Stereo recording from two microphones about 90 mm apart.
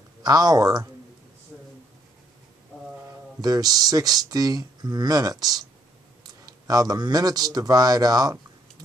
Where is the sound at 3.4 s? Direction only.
45° right (ahead or behind).